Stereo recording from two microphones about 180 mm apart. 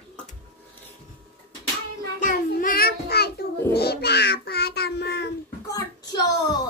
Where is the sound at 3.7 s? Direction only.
60° left (ahead or behind).